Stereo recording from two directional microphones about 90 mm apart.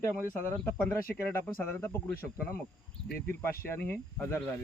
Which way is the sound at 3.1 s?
25° left (ahead or behind).